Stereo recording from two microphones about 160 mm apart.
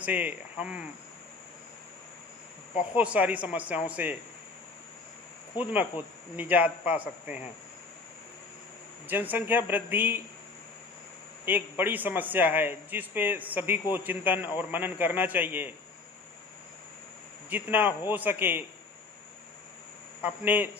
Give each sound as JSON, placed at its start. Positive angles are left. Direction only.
{"t": 0.0, "sound": "a man's voice", "side_deg": -10}
{"t": 2.9, "sound": "a man's voice", "side_deg": -10}
{"t": 5.5, "sound": "a man's voice", "side_deg": -10}
{"t": 9.0, "sound": "a man's voice", "side_deg": -10}
{"t": 11.4, "sound": "a man's voice", "side_deg": -10}
{"t": 17.5, "sound": "a man's voice", "side_deg": -10}
{"t": 20.2, "sound": "a man's voice", "side_deg": -10}